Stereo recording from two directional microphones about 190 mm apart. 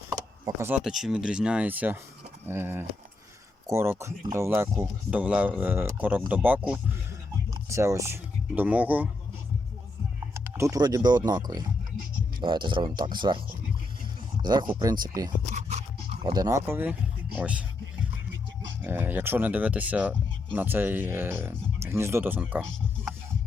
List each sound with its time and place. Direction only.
0.1 s keys jangling: 15° right (ahead or behind)
0.8 s speech: centre (ahead or behind)
10.3 s speech: 15° right (ahead or behind)
12.4 s speech: 25° right (ahead or behind)
14.7 s speech: 20° right (ahead or behind)
15.4 s a sound: 35° right (ahead or behind)
16.2 s speech: 20° right (ahead or behind)
17.3 s a sound: 5° right (ahead or behind)
18.8 s speech: 10° right (ahead or behind)